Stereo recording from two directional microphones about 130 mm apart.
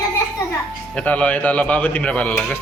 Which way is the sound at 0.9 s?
10° left (ahead or behind).